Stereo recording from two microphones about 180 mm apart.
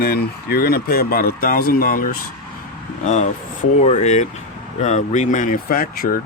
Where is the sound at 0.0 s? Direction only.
60° left (ahead or behind).